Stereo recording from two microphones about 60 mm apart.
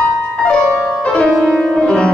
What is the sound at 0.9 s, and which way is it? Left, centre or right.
Music, centre.